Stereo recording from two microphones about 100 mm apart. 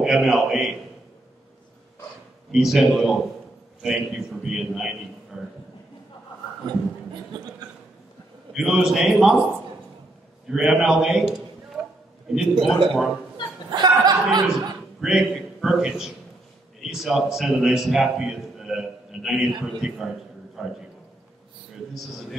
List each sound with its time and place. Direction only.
0.0 s a man's voice: centre (ahead or behind)
2.5 s a man's voice: 5° right (ahead or behind)
8.5 s a man's voice: 5° right (ahead or behind)
10.5 s a man's voice: 5° right (ahead or behind)
13.7 s speech: 45° right (ahead or behind)
15.0 s a man's voice: centre (ahead or behind)